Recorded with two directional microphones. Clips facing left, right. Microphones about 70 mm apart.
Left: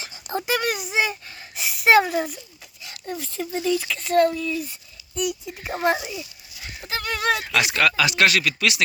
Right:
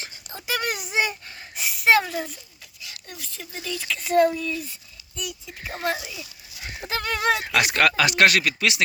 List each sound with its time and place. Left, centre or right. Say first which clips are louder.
0.5 s a sound: left 1 dB; centre
2.8 s a sound: left 9 dB; left
3.5 s speech: left 10 dB; left
3.8 s speech: left 2 dB; centre
4.0 s speech: right 1 dB; centre
4.4 s speech: left 3 dB; centre
4.7 s speech: left 6 dB; centre
6.7 s horse: right 1 dB; right
7.2 s speech: even; right
7.7 s speech: right 1 dB; right
8.5 s speech: left 1 dB; right